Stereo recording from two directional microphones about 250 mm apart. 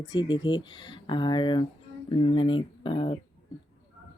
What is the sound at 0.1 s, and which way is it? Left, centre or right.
Speech, centre.